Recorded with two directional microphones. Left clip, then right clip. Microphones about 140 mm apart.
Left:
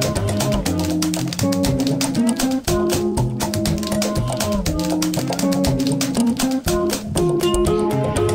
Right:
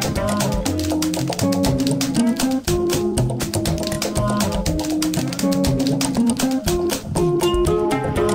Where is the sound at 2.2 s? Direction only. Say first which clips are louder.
Even; 10° right (ahead or behind).